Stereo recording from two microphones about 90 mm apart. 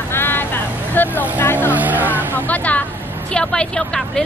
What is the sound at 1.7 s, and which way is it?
Speech, 20° right (ahead or behind).